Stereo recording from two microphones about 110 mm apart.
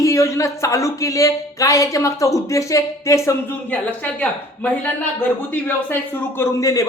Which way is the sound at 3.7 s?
15° left (ahead or behind).